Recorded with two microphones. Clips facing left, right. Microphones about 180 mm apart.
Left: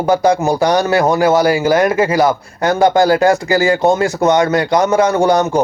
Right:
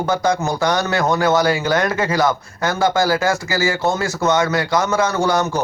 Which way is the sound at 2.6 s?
15° left (ahead or behind).